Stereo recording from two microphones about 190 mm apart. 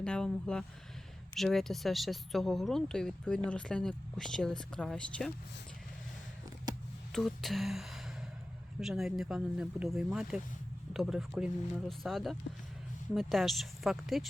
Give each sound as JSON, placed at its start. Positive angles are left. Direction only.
{"t": 0.0, "sound": "speech", "side_deg": 5}
{"t": 6.7, "sound": "a sound", "side_deg": -20}
{"t": 7.1, "sound": "speech", "side_deg": 0}